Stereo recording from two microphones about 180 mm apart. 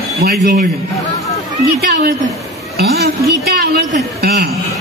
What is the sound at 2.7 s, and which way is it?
A woman's voice, 65° right (ahead or behind).